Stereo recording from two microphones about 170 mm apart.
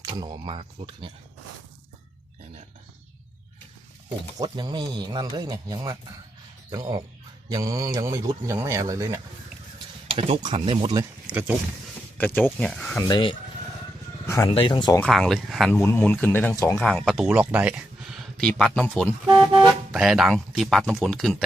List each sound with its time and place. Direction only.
0.0 s speech: 25° right (ahead or behind)
4.4 s speech: 25° right (ahead or behind)
9.7 s speech: 35° right (ahead or behind)
11.3 s speech: 10° right (ahead or behind)
12.1 s speech: 10° left (ahead or behind)
13.0 s speech: 25° left (ahead or behind)
14.3 s a sound: 15° left (ahead or behind)
14.5 s speech: 30° left (ahead or behind)
15.0 s speech: centre (ahead or behind)
15.7 s speech: 10° left (ahead or behind)
16.8 s speech: 5° left (ahead or behind)
17.2 s speech: 10° right (ahead or behind); by 19.1 s 10° left (ahead or behind)
19.5 s speech: 5° right (ahead or behind)